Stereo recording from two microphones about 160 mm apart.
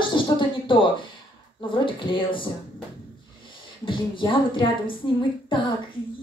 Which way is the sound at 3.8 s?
30° left (ahead or behind).